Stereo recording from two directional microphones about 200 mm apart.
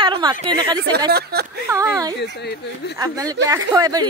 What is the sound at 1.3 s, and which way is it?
Speech, 50° right (ahead or behind).